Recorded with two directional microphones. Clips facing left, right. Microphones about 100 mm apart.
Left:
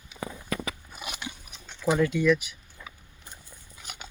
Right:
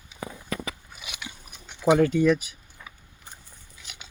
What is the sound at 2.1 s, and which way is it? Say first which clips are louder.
Speech: right 2 dB; 40° right (ahead or behind).